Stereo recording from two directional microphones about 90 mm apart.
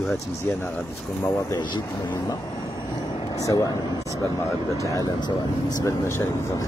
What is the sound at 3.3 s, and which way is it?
Speech, 40° left (ahead or behind).